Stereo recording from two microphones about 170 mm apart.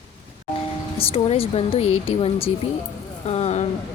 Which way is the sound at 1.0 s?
35° left (ahead or behind).